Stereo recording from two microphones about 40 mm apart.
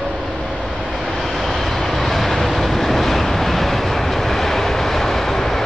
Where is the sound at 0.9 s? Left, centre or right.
Centre.